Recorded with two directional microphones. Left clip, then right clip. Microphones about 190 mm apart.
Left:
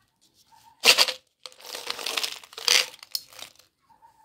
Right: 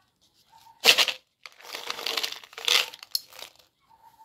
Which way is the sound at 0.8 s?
5° left (ahead or behind).